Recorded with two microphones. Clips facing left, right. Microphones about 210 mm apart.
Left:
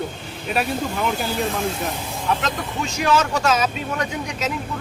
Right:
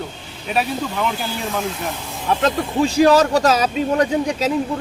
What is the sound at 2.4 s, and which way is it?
Speech, 35° right (ahead or behind).